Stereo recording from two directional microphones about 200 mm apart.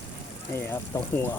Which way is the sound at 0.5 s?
10° left (ahead or behind).